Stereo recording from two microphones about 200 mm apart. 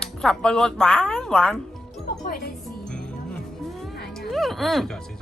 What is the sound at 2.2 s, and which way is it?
Speech, 50° left (ahead or behind).